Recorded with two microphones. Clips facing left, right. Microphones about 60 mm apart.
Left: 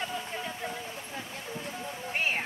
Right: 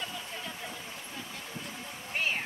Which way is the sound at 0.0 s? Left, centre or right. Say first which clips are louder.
Left 4 dB; left.